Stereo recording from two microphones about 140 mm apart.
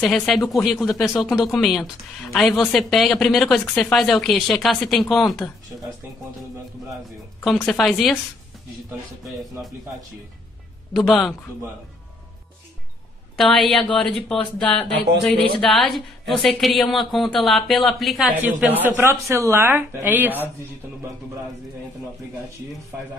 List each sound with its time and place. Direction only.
0.0 s speech: 5° left (ahead or behind)
7.4 s speech: centre (ahead or behind)
10.9 s speech: centre (ahead or behind)
13.4 s speech: centre (ahead or behind)
15.3 s speech: 40° right (ahead or behind)
15.7 s speech: centre (ahead or behind)
18.8 s speech: 15° right (ahead or behind)